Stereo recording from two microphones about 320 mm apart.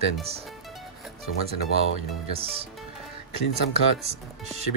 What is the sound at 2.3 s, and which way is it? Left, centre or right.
Speech, centre.